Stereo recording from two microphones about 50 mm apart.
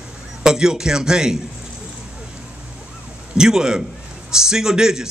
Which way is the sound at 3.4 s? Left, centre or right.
Centre.